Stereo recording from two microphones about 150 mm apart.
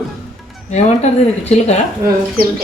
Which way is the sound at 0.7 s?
45° left (ahead or behind).